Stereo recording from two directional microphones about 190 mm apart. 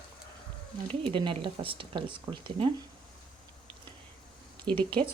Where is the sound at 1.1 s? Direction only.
25° right (ahead or behind).